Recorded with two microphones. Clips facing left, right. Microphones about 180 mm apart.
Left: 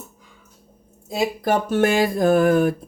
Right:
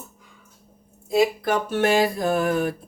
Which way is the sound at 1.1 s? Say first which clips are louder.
Right 1 dB; 40° left (ahead or behind).